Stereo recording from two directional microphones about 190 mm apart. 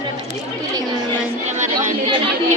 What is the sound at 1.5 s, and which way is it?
Chatter, 40° right (ahead or behind).